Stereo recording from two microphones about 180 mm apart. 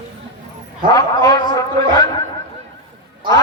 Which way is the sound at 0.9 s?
20° left (ahead or behind).